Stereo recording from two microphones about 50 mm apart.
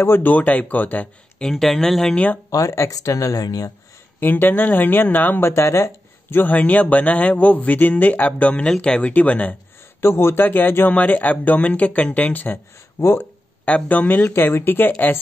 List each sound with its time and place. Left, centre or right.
0.2 s speech: left
1.5 s speech: centre
2.6 s speech: left
4.2 s speech: left
5.5 s speech: left
6.4 s speech: left
8.8 s speech: centre
9.1 s speech: left
9.9 s speech: left
10.9 s speech: left
13.0 s speech: left
13.7 s speech: left
14.3 s speech: left